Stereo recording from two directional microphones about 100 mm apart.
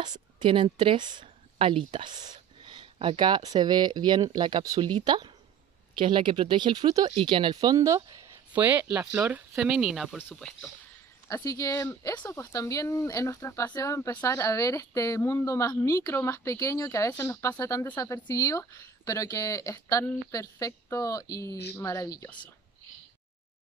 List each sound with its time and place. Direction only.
0.0 s speech: 50° right (ahead or behind)
1.2 s a sound: 65° right (ahead or behind)
2.0 s speech: 45° right (ahead or behind)
7.2 s speech: 55° right (ahead or behind)
7.7 s speech: 35° right (ahead or behind)
8.5 s speech: 15° right (ahead or behind); by 10.7 s centre (ahead or behind)
11.2 s speech: 35° left (ahead or behind)